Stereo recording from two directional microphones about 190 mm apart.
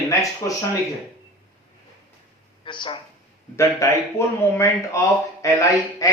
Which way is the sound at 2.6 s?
25° left (ahead or behind).